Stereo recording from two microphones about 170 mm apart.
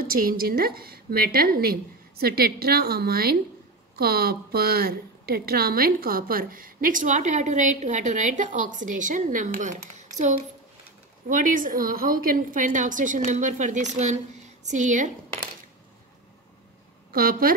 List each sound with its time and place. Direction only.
0.0 s a woman's voice: 60° right (ahead or behind)
17.1 s a woman's voice: 60° right (ahead or behind)